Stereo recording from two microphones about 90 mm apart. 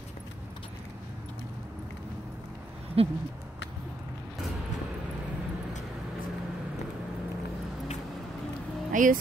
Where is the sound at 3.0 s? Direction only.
90° right.